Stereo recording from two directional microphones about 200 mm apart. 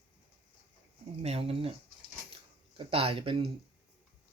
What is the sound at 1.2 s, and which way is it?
Speech, 30° right (ahead or behind).